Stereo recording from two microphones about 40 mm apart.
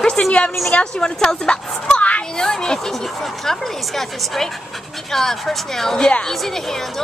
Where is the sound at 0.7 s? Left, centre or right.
Left.